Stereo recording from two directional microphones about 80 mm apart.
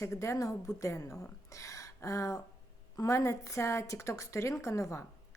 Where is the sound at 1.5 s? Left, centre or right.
Left.